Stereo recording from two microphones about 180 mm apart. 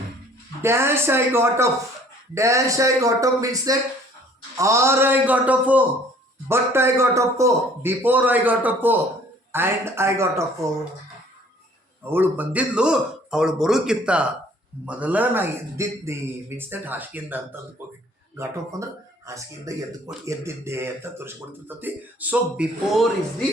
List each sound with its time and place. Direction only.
0.6 s speech: 15° right (ahead or behind)
12.1 s a man's voice: 10° right (ahead or behind)